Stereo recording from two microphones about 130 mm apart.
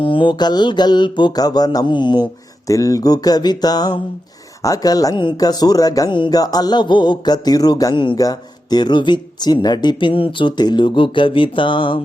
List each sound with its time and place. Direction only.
0.0 s speech: 40° left (ahead or behind)
2.6 s speech: 25° left (ahead or behind)